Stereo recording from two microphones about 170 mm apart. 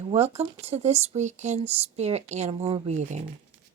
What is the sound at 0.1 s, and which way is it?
Speech, 40° right (ahead or behind).